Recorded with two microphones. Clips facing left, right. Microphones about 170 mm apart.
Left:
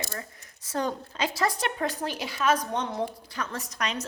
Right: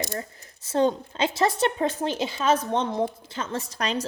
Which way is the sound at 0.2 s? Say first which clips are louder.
Right 5 dB; 30° right (ahead or behind).